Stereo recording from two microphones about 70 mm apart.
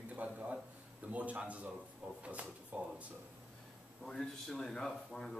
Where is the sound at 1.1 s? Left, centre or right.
Right.